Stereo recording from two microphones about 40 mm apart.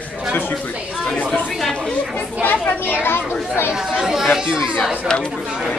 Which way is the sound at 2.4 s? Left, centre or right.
Left.